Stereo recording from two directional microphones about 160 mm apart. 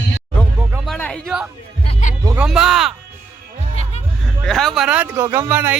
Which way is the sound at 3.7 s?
40° left (ahead or behind).